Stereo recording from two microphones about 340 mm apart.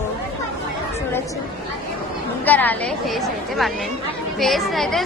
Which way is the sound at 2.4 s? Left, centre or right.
Centre.